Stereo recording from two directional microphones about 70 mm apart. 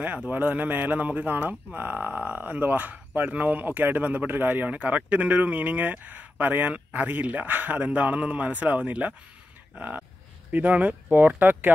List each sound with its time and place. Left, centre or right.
0.3 s speech: right